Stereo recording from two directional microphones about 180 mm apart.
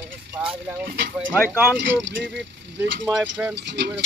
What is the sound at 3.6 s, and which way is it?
Speech, 70° right (ahead or behind).